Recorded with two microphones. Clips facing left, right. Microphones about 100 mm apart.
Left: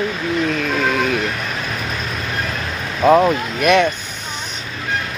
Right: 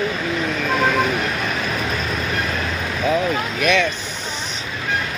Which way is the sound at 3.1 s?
55° left (ahead or behind).